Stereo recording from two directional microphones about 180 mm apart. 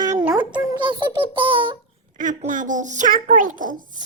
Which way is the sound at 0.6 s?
20° right (ahead or behind).